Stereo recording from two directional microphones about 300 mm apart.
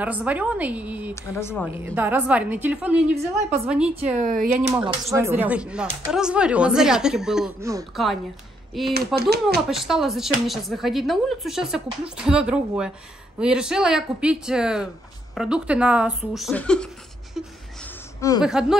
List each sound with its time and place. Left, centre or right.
0.0 s speech: centre
1.1 s a woman's voice: centre
1.9 s speech: centre
4.2 s speech: right
4.8 s speech: centre
8.9 s speech: right
9.7 s speech: centre
18.4 s speech: centre